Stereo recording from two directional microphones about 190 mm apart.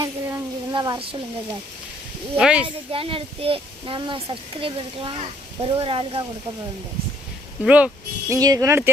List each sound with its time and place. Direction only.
0.0 s a sound: 15° right (ahead or behind)
2.3 s speech: 5° right (ahead or behind)
2.6 s speech: 30° right (ahead or behind)
7.6 s speech: 5° right (ahead or behind)
8.3 s speech: 20° right (ahead or behind)